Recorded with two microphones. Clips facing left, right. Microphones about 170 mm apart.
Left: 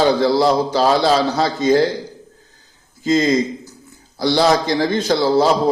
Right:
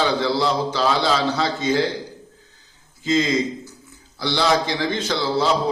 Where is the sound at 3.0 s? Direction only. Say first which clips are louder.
Left 4 dB; 40° left (ahead or behind).